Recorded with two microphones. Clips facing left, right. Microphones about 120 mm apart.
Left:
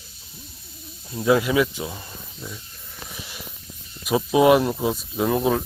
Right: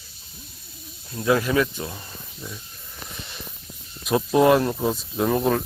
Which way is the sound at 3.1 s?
5° left (ahead or behind).